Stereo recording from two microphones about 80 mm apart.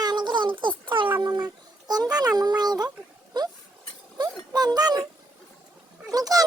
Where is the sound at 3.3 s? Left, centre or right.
Right.